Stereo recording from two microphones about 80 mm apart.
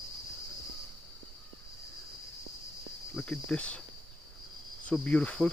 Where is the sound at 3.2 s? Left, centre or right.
Centre.